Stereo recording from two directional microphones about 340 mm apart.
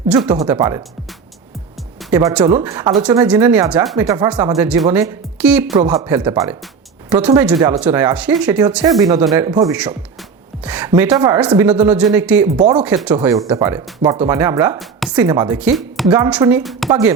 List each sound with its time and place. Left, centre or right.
0.3 s speech: centre
2.0 s speech: centre
5.7 s speech: centre
6.1 s speech: centre